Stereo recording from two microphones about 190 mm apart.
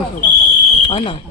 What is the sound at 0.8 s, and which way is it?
Speech, 25° left (ahead or behind).